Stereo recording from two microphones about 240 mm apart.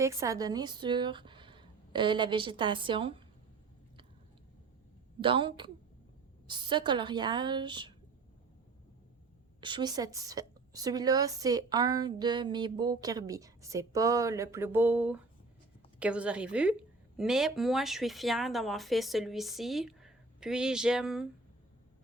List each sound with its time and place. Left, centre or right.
0.0 s speech: centre
5.2 s speech: right
9.6 s a woman's voice: centre